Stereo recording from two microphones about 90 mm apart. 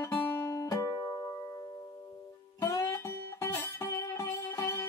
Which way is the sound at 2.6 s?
40° left (ahead or behind).